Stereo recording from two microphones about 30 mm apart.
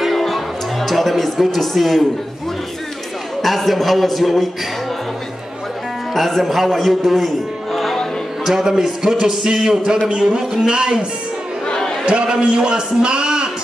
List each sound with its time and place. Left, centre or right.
0.1 s music: centre
1.4 s a man's voice: centre
3.4 s a man's voice: centre
6.1 s a man's voice: centre
8.5 s speech: centre
10.7 s a man's voice: right
11.6 s chatter: left
12.1 s a man's voice: right